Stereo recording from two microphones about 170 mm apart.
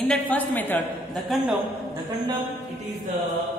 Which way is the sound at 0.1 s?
10° left (ahead or behind).